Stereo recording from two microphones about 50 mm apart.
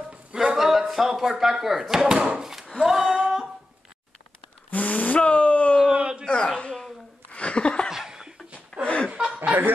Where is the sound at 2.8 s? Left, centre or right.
Centre.